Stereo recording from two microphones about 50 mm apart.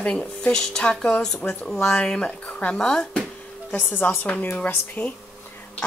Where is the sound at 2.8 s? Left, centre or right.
Centre.